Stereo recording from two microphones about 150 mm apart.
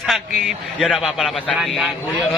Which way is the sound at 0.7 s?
5° left (ahead or behind).